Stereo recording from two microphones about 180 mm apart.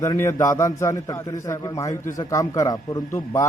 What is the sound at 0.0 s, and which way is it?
A man's voice, 15° left (ahead or behind).